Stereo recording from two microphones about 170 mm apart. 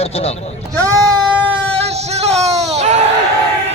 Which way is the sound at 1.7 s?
40° right (ahead or behind).